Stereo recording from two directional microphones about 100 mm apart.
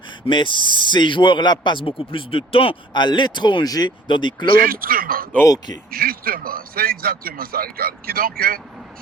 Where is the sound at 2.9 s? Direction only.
50° left (ahead or behind).